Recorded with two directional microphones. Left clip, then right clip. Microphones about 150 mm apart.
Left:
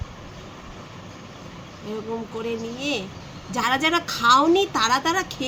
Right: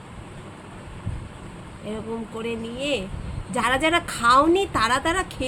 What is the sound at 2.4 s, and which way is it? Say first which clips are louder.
A woman's voice: right 1 dB; 15° right (ahead or behind).